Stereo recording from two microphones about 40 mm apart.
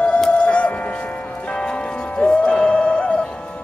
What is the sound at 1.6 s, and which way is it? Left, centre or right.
Music, left.